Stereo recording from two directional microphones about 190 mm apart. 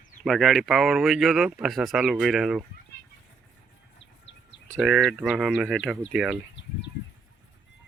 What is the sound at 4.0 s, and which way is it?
Bird, 70° left (ahead or behind).